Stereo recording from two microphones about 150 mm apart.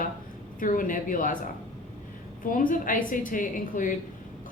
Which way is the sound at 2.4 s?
65° left (ahead or behind).